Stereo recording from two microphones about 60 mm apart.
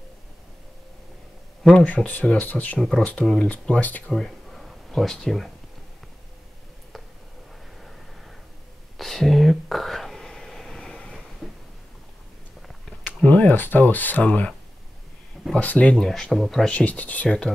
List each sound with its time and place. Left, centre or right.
1.6 s speech: centre
1.9 s speech: left
4.1 s a sound: centre
8.9 s whispering: centre
13.0 s a sound: left
15.5 s speech: left
16.0 s speech: centre
16.6 s speech: left